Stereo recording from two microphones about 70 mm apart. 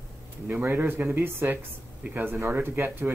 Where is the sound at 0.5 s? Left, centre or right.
Right.